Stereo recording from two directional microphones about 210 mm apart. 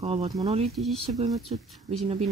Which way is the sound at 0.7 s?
Centre (ahead or behind).